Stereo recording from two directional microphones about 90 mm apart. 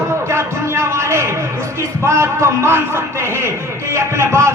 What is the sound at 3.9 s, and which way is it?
Speech, 30° right (ahead or behind).